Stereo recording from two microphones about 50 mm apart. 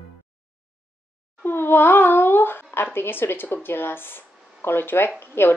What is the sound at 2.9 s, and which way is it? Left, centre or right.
Speech, left.